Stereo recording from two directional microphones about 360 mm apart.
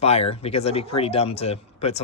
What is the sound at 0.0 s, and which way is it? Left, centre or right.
Speech, centre.